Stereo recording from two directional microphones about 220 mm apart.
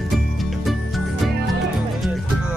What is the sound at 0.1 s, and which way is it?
Music, centre (ahead or behind).